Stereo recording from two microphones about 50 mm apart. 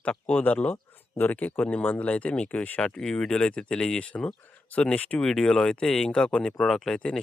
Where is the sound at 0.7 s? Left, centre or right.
Left.